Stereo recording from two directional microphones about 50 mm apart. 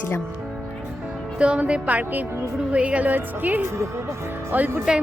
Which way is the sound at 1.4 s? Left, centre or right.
Right.